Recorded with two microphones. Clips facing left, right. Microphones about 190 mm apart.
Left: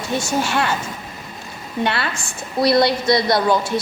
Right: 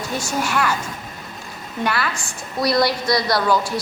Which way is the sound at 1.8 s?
25° left (ahead or behind).